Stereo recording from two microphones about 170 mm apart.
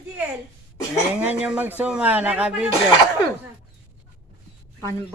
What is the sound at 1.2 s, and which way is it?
Speech, 10° right (ahead or behind).